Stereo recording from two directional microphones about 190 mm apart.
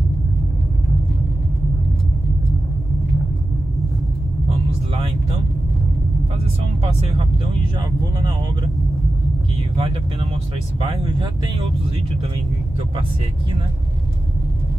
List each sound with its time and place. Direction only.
4.5 s vehicle: 30° right (ahead or behind)
6.8 s speech: 35° right (ahead or behind)
9.8 s speech: 30° right (ahead or behind)